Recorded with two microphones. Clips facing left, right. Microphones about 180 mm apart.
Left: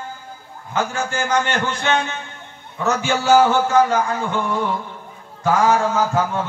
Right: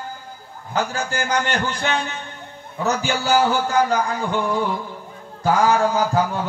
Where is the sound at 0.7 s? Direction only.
35° right (ahead or behind).